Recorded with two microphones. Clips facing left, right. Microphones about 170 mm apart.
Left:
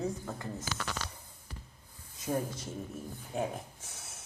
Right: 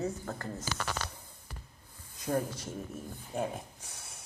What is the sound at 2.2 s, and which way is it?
Speech, centre (ahead or behind).